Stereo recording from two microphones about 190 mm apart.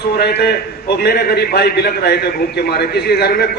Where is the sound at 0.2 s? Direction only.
55° left (ahead or behind).